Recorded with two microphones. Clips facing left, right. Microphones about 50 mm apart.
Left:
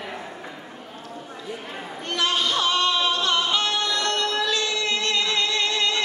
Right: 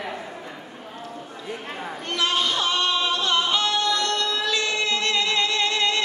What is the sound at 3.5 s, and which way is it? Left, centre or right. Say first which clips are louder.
Music: right 1 dB; left.